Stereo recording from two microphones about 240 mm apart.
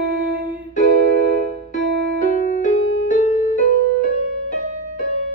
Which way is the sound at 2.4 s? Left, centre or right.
Left.